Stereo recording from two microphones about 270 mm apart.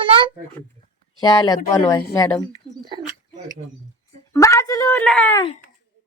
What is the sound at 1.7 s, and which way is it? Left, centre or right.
Speech, centre.